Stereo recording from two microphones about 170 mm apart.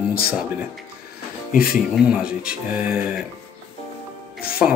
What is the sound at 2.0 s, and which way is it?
Speech, 5° right (ahead or behind).